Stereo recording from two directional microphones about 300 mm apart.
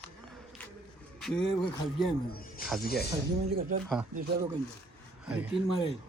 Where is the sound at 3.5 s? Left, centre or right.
Right.